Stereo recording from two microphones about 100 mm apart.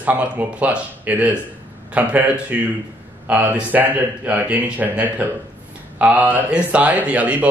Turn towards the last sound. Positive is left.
turn(degrees=-15)  # may be behind; listen again after turning